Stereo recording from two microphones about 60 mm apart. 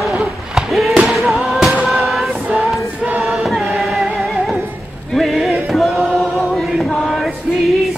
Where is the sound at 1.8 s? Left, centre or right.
Centre.